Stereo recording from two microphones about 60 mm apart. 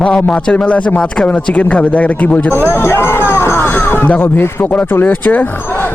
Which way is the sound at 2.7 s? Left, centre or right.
Left.